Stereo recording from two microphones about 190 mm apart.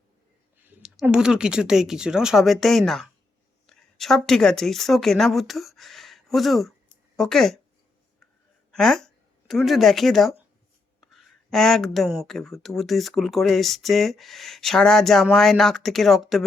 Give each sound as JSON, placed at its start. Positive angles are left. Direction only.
{"t": 0.6, "sound": "speech", "side_deg": -5}
{"t": 8.7, "sound": "speech", "side_deg": 0}